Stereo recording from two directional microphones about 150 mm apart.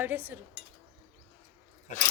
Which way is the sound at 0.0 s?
10° right (ahead or behind).